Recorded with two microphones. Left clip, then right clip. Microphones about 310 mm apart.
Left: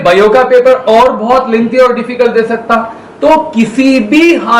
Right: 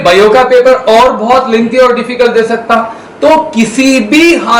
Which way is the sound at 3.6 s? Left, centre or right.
Left.